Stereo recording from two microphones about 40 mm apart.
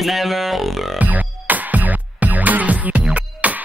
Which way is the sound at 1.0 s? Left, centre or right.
Right.